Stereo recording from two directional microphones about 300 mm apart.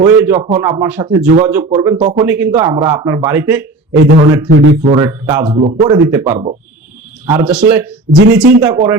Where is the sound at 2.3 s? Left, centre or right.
Centre.